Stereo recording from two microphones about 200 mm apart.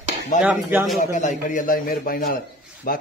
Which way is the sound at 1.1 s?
40° left (ahead or behind).